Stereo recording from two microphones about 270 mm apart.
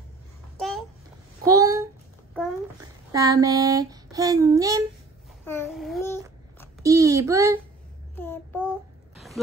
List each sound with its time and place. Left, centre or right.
0.6 s babbling: centre
1.4 s a sound: centre
2.8 s child singing: centre
5.4 s babbling: centre
6.8 s a sound: centre
8.2 s child singing: centre